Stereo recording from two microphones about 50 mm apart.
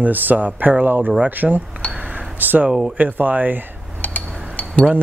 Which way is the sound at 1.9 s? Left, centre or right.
Right.